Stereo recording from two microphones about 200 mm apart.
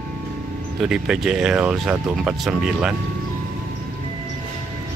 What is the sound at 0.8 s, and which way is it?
Speech, 5° right (ahead or behind).